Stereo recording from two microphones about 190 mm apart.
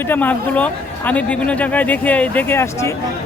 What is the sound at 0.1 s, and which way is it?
Speech, 10° left (ahead or behind).